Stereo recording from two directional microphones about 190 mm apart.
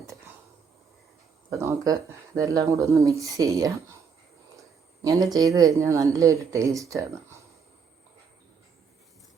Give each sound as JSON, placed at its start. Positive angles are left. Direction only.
{"t": 1.5, "sound": "speech", "side_deg": -15}
{"t": 5.0, "sound": "speech", "side_deg": -15}